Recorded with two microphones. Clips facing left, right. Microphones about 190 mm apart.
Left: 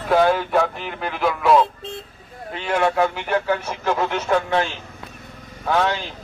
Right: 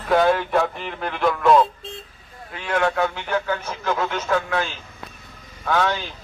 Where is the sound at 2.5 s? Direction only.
25° left (ahead or behind).